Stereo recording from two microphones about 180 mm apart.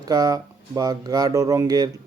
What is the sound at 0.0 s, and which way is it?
Speech, 20° right (ahead or behind).